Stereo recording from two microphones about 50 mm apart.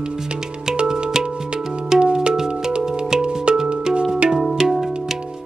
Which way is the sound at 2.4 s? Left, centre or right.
Centre.